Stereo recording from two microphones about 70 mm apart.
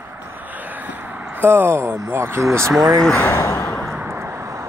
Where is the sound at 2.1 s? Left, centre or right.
Right.